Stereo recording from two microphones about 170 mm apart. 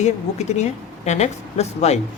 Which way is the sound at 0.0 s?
40° left (ahead or behind).